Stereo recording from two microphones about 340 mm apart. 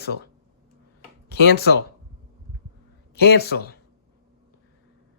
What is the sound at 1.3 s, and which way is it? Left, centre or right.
Speech, left.